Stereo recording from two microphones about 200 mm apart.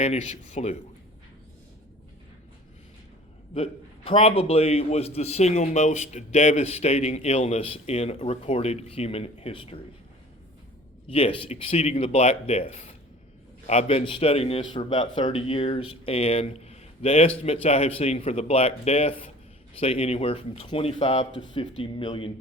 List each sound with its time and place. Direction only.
0.0 s a man's voice: 35° left (ahead or behind)
3.5 s a man's voice: 30° left (ahead or behind)
11.1 s a man's voice: 30° left (ahead or behind)